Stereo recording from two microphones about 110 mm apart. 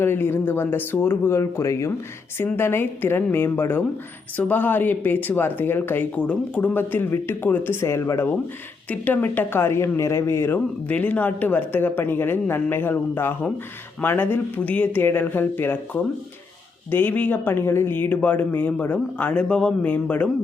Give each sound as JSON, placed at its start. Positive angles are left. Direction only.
{"t": 0.0, "sound": "a woman's voice", "side_deg": 20}